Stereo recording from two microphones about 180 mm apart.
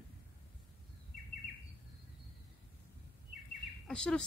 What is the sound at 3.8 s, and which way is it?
Speech, 5° left (ahead or behind).